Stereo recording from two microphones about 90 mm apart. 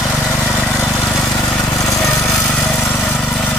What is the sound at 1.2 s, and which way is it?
Lawn mower, 40° left (ahead or behind).